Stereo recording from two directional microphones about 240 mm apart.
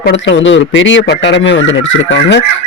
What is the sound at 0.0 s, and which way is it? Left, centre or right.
Speech, left.